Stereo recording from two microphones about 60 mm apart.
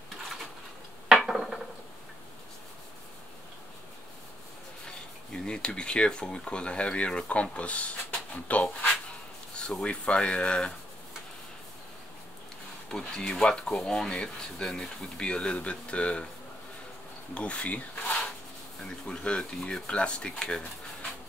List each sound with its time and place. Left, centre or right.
1.0 s a sound: centre
4.8 s speech: centre
12.9 s speech: centre
17.3 s speech: centre